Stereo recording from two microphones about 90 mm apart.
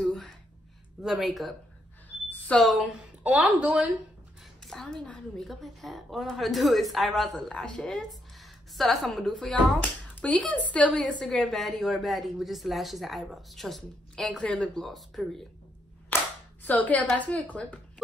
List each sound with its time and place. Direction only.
0.0 s a sound: 5° left (ahead or behind)
1.0 s a woman's voice: centre (ahead or behind)
2.2 s a sound: 15° left (ahead or behind)
2.6 s a woman's voice: centre (ahead or behind)
3.3 s speech: 15° right (ahead or behind)
4.6 s a woman's voice: 5° left (ahead or behind)
16.6 s a woman's voice: 20° left (ahead or behind)